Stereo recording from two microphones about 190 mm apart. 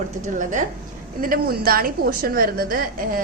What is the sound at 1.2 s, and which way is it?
A woman's voice, 50° right (ahead or behind).